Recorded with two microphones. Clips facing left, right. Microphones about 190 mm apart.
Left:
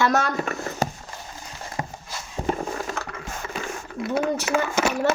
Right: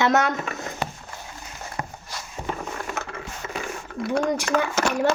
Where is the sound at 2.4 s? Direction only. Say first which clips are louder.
Left 5 dB; 35° left (ahead or behind).